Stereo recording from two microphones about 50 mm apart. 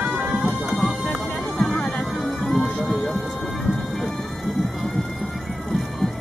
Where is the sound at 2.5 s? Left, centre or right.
Centre.